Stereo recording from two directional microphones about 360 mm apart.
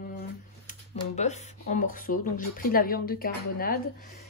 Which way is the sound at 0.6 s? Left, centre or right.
Centre.